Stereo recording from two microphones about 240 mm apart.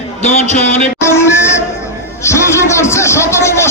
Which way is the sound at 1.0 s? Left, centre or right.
Centre.